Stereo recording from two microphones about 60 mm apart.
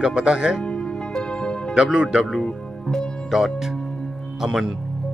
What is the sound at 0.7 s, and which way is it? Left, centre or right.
Music, centre.